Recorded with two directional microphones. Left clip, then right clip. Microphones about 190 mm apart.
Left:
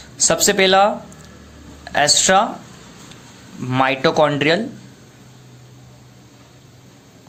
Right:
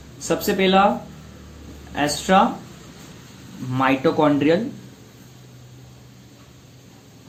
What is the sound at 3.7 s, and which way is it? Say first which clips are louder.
Speech: left 3 dB; 45° left (ahead or behind).